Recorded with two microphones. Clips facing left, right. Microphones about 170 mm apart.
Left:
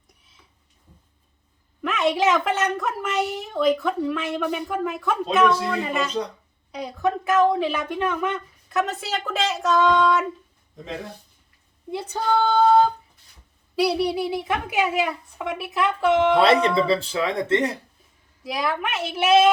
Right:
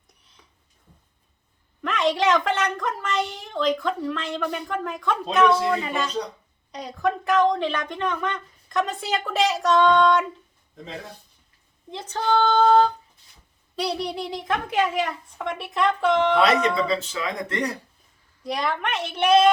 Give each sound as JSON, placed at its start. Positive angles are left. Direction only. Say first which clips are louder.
{"t": 1.8, "sound": "a woman's voice", "louder": "left 1 dB", "side_deg": 5}
{"t": 11.9, "sound": "a child's voice", "louder": "left 1 dB", "side_deg": 10}
{"t": 16.4, "sound": "speech", "louder": "left 2 dB", "side_deg": 30}
{"t": 18.4, "sound": "a woman's voice", "louder": "even", "side_deg": 5}